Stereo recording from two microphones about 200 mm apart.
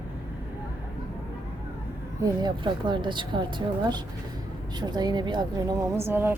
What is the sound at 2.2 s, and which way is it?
A woman's voice, 20° right (ahead or behind).